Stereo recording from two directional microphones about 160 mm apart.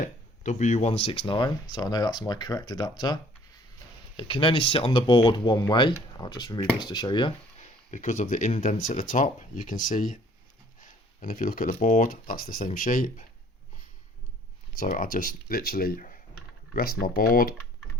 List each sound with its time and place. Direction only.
0.0 s speech: 50° left (ahead or behind); by 3.2 s 25° left (ahead or behind)
4.2 s speech: 30° left (ahead or behind)
7.6 s speech: 50° left (ahead or behind)
14.8 s speech: 60° left (ahead or behind)
16.7 s speech: 70° left (ahead or behind)